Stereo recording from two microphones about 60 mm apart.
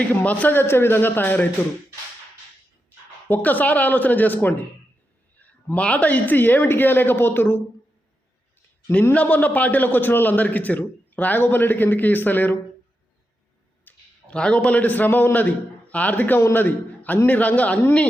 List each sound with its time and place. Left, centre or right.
0.0 s a man's voice: left
3.2 s a man's voice: left
9.1 s a man's voice: left
13.9 s a sound: left
14.3 s a man's voice: centre